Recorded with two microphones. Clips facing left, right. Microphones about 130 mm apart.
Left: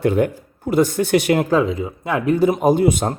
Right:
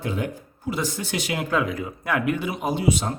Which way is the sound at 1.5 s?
25° left (ahead or behind).